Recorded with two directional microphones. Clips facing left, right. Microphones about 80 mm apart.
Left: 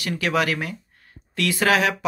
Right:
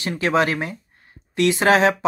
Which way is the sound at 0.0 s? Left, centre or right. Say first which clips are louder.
Right 3 dB; right.